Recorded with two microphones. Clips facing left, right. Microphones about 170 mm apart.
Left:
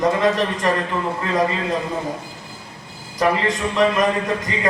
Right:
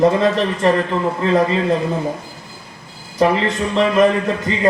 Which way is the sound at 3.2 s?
30° right (ahead or behind).